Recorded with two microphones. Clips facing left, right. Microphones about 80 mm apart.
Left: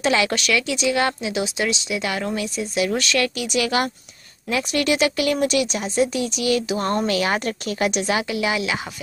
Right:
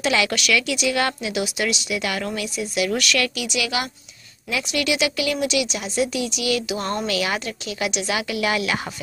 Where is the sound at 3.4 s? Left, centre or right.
Left; by 8.9 s centre.